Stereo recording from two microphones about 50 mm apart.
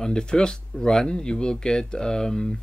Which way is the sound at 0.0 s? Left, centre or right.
Centre.